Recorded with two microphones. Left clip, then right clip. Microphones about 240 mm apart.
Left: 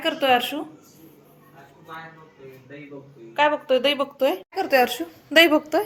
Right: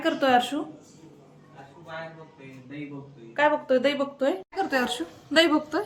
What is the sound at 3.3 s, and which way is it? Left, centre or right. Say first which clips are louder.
Speech: left 2 dB; centre.